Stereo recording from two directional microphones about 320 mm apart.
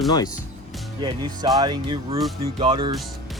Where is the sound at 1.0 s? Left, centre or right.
Centre.